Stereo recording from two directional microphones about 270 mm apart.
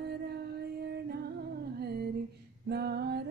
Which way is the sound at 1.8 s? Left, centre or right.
Right.